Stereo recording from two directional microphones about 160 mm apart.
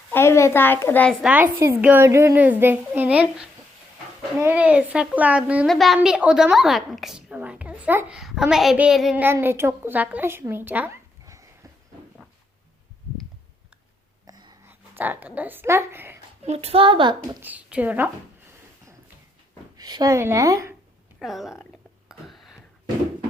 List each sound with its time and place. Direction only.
0.1 s a child's voice: 15° left (ahead or behind)
1.2 s a child's voice: 10° right (ahead or behind)
9.2 s speech: 15° right (ahead or behind)
14.3 s a sound: 25° right (ahead or behind)
14.7 s speech: 10° right (ahead or behind)
16.5 s a woman's voice: 40° right (ahead or behind)
17.4 s speech: 10° right (ahead or behind)
19.7 s speech: 25° right (ahead or behind)
21.2 s a woman's voice: centre (ahead or behind)
22.1 s a sound: centre (ahead or behind)